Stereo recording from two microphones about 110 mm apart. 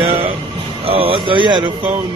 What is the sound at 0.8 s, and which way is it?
Speech, 60° right (ahead or behind).